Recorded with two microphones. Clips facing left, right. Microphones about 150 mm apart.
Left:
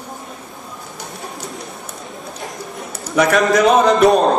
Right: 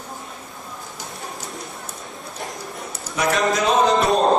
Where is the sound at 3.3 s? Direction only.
65° left (ahead or behind).